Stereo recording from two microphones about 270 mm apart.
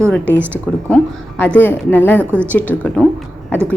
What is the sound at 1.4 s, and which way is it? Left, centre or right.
A woman's voice, centre.